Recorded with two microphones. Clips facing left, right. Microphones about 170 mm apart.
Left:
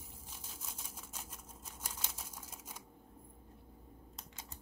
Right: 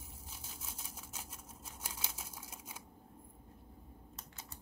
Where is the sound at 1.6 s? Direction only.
10° right (ahead or behind).